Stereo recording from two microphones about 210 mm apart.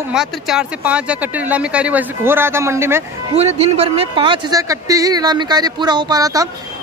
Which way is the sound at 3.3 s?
30° right (ahead or behind).